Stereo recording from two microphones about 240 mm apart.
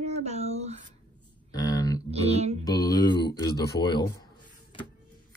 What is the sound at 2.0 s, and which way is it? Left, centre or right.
Music, right.